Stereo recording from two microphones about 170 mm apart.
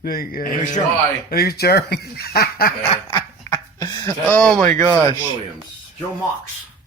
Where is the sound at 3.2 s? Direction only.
15° left (ahead or behind).